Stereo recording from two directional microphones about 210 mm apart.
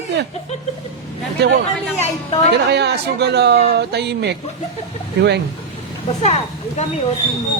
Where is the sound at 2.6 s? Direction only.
55° right (ahead or behind).